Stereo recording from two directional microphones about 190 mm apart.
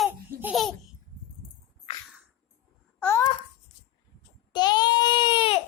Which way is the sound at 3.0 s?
15° left (ahead or behind).